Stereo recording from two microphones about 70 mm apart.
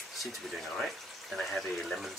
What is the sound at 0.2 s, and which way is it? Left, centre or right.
Speech, centre.